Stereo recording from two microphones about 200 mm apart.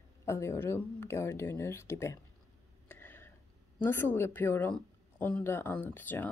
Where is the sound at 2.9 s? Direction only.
10° left (ahead or behind).